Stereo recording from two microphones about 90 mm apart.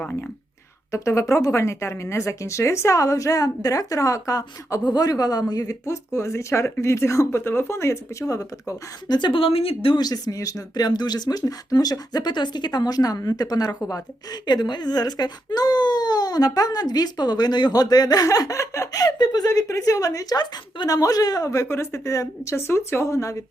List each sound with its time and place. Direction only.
0.0 s speech: 15° left (ahead or behind)
0.9 s speech: 35° left (ahead or behind)
9.1 s speech: 65° left (ahead or behind); by 10.0 s 90° left
10.0 s speech: 45° left (ahead or behind)
19.5 s speech: 35° left (ahead or behind)